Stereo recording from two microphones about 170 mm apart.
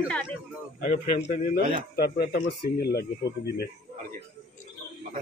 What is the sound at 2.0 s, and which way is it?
Speech, 70° left (ahead or behind).